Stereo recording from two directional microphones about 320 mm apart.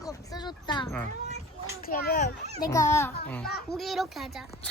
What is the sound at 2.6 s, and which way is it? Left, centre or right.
A child's voice, centre.